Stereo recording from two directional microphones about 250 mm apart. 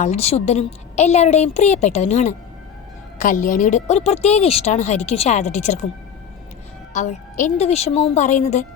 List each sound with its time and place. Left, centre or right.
0.0 s a woman's voice: left
6.9 s a woman's voice: left